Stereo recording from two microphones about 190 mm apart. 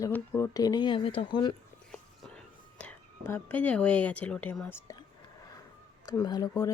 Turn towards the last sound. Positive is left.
turn(degrees=20)  # may be behind; listen again after turning